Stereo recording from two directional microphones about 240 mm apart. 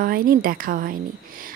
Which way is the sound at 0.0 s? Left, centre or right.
Right.